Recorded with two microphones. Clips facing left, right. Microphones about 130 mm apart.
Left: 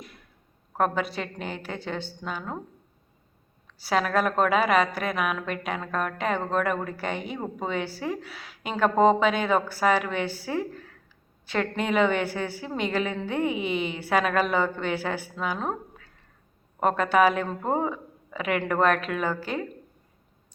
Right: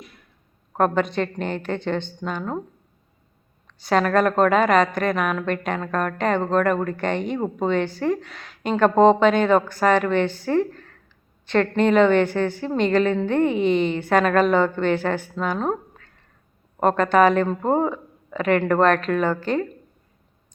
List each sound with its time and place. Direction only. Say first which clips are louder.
0.8 s a woman's voice: right 6 dB; 5° left (ahead or behind)
3.8 s a woman's voice: right 5 dB; 5° left (ahead or behind)
16.8 s a woman's voice: right 4 dB; 10° left (ahead or behind)